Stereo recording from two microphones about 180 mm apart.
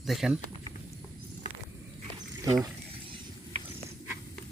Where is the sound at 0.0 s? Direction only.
Centre (ahead or behind).